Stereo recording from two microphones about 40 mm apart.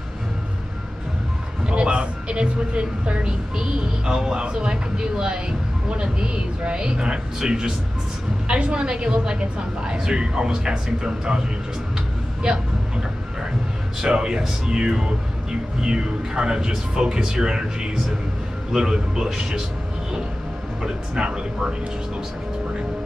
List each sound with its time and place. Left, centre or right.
1.7 s a man's voice: right
8.5 s speech: right
12.4 s vehicle: right
14.0 s a man's voice: right
20.8 s speech: centre